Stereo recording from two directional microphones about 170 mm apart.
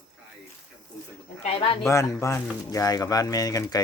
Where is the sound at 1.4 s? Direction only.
35° left (ahead or behind).